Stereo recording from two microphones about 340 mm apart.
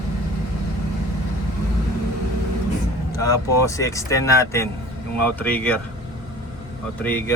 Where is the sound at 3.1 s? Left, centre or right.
Centre.